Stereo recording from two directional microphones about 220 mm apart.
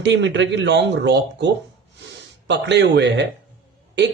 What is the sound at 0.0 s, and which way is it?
Speech, 55° right (ahead or behind).